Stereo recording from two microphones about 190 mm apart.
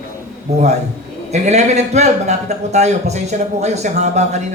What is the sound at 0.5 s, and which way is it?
A man's voice, 35° right (ahead or behind).